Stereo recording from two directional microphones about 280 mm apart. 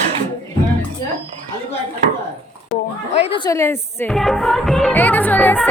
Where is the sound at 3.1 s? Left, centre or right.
Left.